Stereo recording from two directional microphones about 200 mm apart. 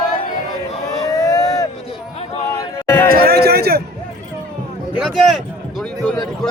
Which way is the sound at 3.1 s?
50° right (ahead or behind).